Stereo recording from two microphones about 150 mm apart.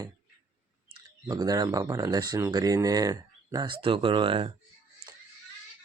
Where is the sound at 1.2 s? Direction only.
25° right (ahead or behind).